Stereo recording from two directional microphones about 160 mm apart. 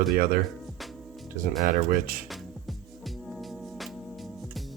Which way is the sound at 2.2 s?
Centre (ahead or behind).